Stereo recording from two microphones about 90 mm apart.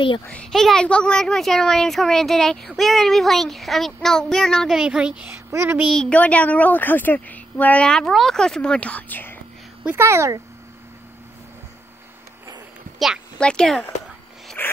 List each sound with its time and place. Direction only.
0.5 s speech: 5° left (ahead or behind)
4.7 s a woman's voice: 10° right (ahead or behind)
5.5 s speech: 30° right (ahead or behind)
6.0 s a woman's voice: 15° left (ahead or behind)
9.9 s speech: 30° right (ahead or behind)
13.4 s a woman's voice: 10° left (ahead or behind)
14.6 s zipper: 25° left (ahead or behind)